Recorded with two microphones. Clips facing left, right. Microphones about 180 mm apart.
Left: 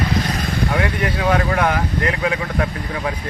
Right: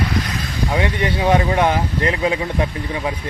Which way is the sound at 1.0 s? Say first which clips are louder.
Right 3 dB; 25° right (ahead or behind).